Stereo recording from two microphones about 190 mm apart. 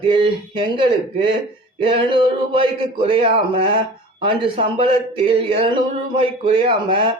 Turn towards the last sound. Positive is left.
turn(degrees=-25)  # may be behind; listen again after turning